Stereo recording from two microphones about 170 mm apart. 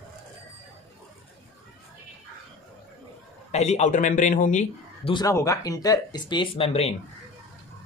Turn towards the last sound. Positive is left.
turn(degrees=35)  # may be behind; listen again after turning